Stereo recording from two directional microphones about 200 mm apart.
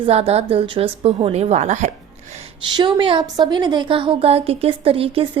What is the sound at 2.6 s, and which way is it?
A woman's voice, 25° right (ahead or behind).